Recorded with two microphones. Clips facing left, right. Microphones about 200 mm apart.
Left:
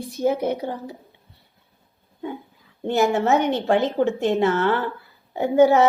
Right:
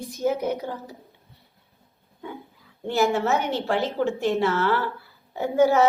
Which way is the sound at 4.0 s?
50° left (ahead or behind).